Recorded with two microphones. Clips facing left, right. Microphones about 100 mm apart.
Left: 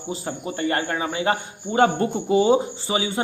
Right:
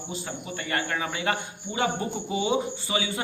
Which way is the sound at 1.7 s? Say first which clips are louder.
Left 9 dB; 50° left (ahead or behind).